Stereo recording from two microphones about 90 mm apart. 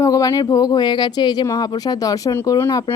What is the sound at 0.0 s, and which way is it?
Speech, 40° left (ahead or behind).